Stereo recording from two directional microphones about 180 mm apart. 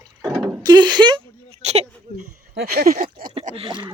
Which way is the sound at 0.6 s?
25° right (ahead or behind).